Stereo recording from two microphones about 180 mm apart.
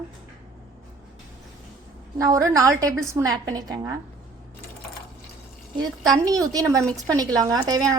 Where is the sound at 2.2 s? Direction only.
15° right (ahead or behind).